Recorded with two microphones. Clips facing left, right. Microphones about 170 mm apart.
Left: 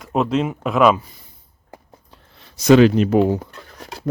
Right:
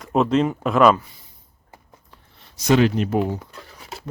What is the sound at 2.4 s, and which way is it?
Speech, 90° left.